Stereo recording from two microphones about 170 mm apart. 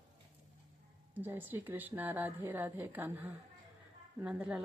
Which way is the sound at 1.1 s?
10° right (ahead or behind).